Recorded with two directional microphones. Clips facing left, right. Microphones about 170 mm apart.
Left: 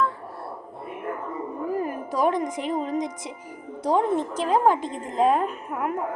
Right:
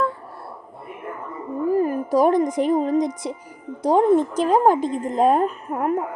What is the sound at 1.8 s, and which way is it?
A woman's voice, 35° right (ahead or behind).